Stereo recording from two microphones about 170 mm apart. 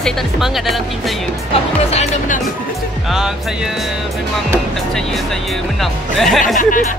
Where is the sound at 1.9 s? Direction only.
45° left (ahead or behind).